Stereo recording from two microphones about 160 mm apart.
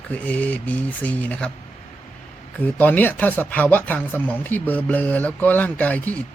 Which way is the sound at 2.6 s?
10° left (ahead or behind).